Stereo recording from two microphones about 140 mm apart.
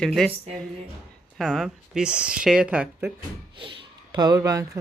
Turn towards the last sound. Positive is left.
turn(degrees=-25)  # may be behind; listen again after turning